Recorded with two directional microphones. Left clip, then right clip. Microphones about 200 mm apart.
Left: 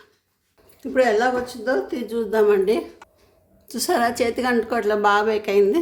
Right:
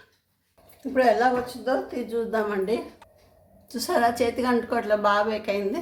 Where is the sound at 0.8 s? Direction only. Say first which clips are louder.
Left 2 dB; 50° left (ahead or behind).